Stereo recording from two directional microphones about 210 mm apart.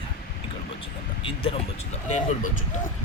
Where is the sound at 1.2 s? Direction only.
25° left (ahead or behind).